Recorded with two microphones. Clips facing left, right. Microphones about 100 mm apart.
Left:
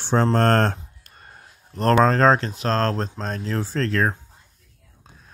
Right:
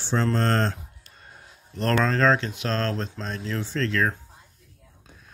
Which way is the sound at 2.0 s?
40° left (ahead or behind).